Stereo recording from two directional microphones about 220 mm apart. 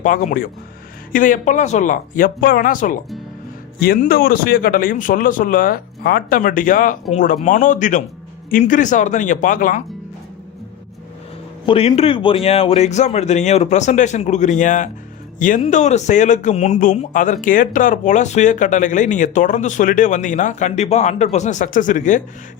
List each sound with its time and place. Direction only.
0.0 s speech: 35° left (ahead or behind)
11.6 s speech: 25° left (ahead or behind)